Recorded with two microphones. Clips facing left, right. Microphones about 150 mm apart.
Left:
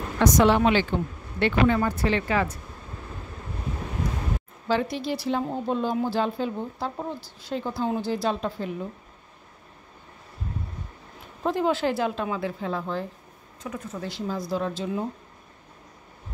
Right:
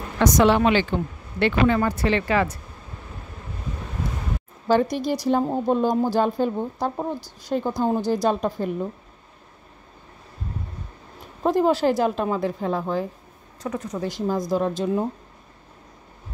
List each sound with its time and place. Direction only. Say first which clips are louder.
0.2 s speech: right 2 dB; 85° right
4.6 s speech: right 5 dB; 45° right (ahead or behind)
11.4 s speech: right 5 dB; 40° right (ahead or behind)
13.6 s speech: right 6 dB; 75° right (ahead or behind)
13.8 s speech: right 6 dB; 40° right (ahead or behind)